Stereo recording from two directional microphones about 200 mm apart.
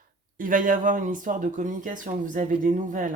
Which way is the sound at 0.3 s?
45° right (ahead or behind).